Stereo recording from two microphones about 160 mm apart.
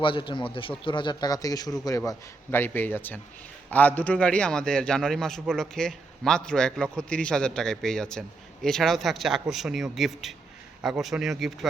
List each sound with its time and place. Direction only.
0.0 s a man's voice: 30° left (ahead or behind); by 11.7 s centre (ahead or behind)